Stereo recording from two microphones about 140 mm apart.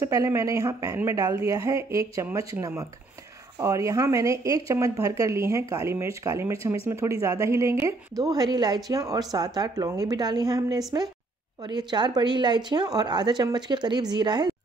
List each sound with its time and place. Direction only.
0.0 s a woman's voice: 20° right (ahead or behind)